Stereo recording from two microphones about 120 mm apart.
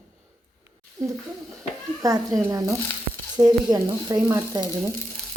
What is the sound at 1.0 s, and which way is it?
Speech, 35° right (ahead or behind).